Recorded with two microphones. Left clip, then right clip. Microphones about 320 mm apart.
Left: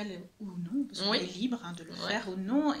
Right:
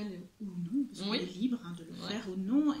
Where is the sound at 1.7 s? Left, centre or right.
Left.